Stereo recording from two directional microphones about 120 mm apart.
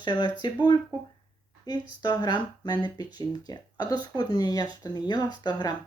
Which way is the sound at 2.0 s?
35° left (ahead or behind).